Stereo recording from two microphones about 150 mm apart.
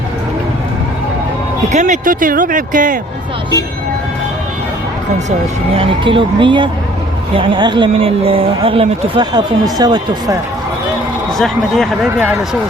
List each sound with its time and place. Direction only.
1.7 s speech: 55° right (ahead or behind)
5.7 s speech: 35° right (ahead or behind)
11.3 s speech: centre (ahead or behind)